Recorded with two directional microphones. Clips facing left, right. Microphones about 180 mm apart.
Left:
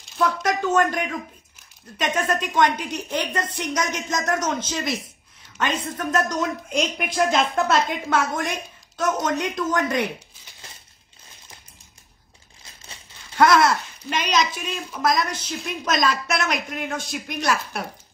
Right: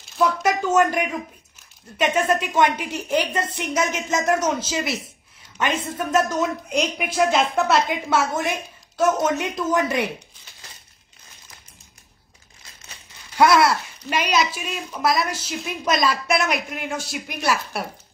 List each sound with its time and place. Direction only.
0.2 s speech: 10° right (ahead or behind)
5.9 s speech: 10° right (ahead or behind)
13.4 s speech: 5° right (ahead or behind)